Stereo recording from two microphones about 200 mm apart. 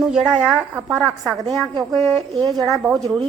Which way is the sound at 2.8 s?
Centre (ahead or behind).